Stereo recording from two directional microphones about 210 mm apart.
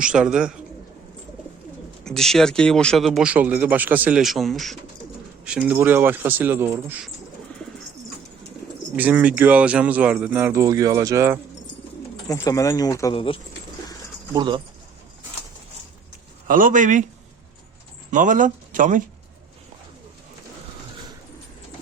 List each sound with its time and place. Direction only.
0.0 s speech: 5° right (ahead or behind)
2.0 s speech: centre (ahead or behind)
9.0 s speech: 5° right (ahead or behind)
12.3 s speech: 15° left (ahead or behind)
14.3 s speech: 20° right (ahead or behind)
16.5 s speech: 40° right (ahead or behind)
18.1 s speech: 40° right (ahead or behind)